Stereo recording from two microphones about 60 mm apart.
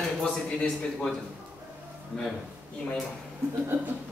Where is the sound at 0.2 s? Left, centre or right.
Centre.